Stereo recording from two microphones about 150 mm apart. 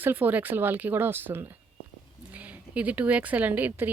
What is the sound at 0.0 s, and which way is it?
A woman's voice, 10° right (ahead or behind).